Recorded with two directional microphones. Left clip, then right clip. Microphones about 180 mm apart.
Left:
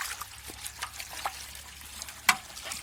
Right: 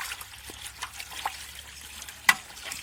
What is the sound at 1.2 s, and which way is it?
Water, 25° left (ahead or behind).